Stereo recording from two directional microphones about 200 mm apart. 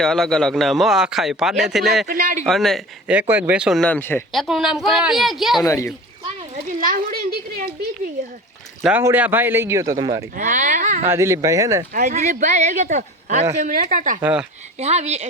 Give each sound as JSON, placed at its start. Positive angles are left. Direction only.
{"t": 0.0, "sound": "a man's voice", "side_deg": 5}
{"t": 2.0, "sound": "speech", "side_deg": -45}
{"t": 2.5, "sound": "a man's voice", "side_deg": 0}
{"t": 5.6, "sound": "speech", "side_deg": 15}
{"t": 6.7, "sound": "a sound", "side_deg": -40}
{"t": 8.8, "sound": "a man's voice", "side_deg": -10}
{"t": 10.3, "sound": "speech", "side_deg": -40}
{"t": 11.0, "sound": "a man's voice", "side_deg": -15}
{"t": 11.9, "sound": "speech", "side_deg": -40}
{"t": 14.2, "sound": "a man's voice", "side_deg": -5}
{"t": 14.8, "sound": "speech", "side_deg": -35}